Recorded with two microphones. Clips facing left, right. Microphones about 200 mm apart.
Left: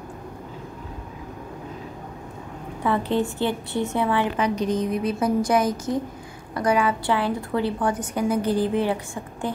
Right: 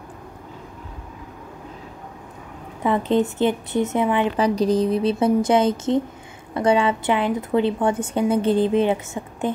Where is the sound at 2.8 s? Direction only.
20° right (ahead or behind).